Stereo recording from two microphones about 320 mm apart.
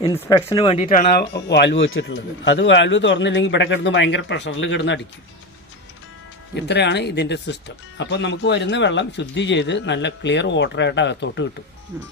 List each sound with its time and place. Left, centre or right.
0.0 s speech: centre; by 4.9 s left
6.6 s speech: left